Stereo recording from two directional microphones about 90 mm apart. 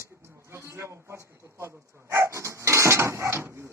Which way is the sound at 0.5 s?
30° right (ahead or behind).